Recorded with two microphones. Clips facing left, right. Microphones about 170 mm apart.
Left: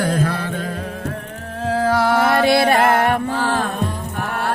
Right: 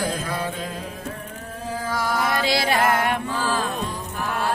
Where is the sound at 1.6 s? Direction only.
70° left (ahead or behind).